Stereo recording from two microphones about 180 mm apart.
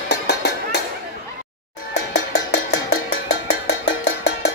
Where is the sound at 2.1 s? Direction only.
65° left (ahead or behind).